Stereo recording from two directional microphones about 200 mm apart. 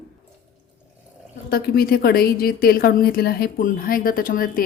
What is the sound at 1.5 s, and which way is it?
A woman's voice, 50° left (ahead or behind).